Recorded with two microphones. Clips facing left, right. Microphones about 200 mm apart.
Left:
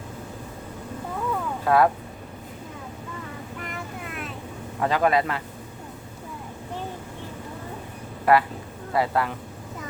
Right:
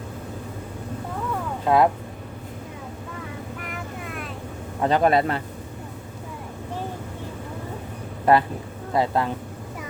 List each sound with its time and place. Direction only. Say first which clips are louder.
1.6 s speech: right 1 dB; 20° right (ahead or behind)
4.0 s vehicle: right 1 dB; centre (ahead or behind)
4.8 s speech: right 3 dB; 25° right (ahead or behind)
8.2 s speech: right 1 dB; 25° right (ahead or behind)